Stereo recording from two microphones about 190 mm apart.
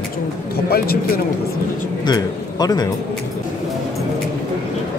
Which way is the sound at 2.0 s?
20° left (ahead or behind).